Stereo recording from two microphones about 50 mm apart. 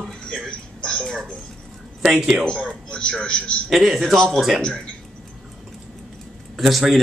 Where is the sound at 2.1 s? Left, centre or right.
Centre.